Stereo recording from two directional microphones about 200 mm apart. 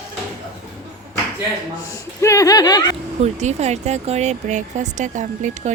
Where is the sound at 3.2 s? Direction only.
35° right (ahead or behind).